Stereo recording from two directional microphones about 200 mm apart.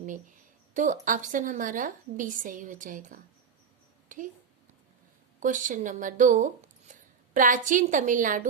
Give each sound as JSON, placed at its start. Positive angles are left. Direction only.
{"t": 0.7, "sound": "a woman's voice", "side_deg": -40}
{"t": 5.4, "sound": "a woman's voice", "side_deg": -40}